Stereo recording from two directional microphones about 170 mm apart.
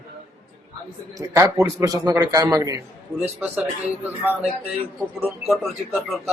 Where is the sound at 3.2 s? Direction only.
10° right (ahead or behind).